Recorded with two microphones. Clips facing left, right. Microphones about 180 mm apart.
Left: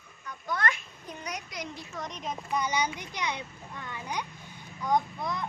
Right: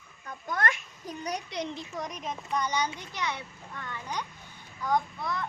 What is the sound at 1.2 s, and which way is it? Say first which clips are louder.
Speech: right 5 dB; 30° right (ahead or behind).